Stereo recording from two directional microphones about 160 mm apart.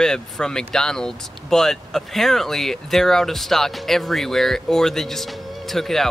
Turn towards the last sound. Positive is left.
turn(degrees=0)  # may be behind; listen again after turning